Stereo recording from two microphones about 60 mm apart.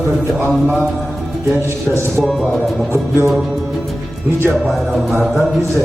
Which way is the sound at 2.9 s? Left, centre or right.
Right.